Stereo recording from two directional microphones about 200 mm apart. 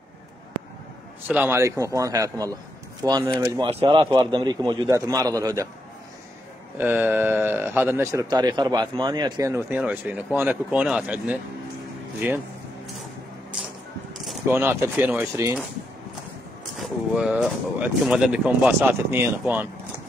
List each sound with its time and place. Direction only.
1.3 s speech: 10° right (ahead or behind)
6.8 s speech: 10° right (ahead or behind)
14.5 s speech: 10° right (ahead or behind)
16.7 s speech: centre (ahead or behind)